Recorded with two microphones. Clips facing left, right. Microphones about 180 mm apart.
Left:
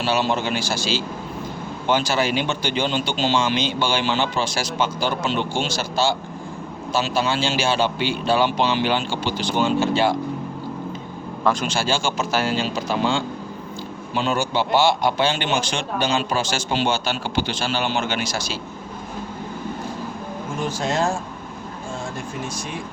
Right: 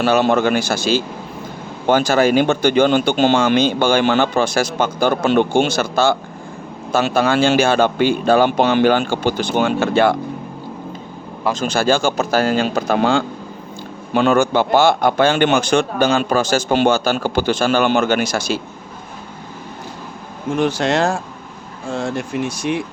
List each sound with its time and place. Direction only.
0.0 s a man's voice: 55° right (ahead or behind)
11.5 s speech: 10° right (ahead or behind)
12.3 s speech: 40° right (ahead or behind)
12.5 s a man's voice: 60° right (ahead or behind)
20.6 s speech: 70° right (ahead or behind)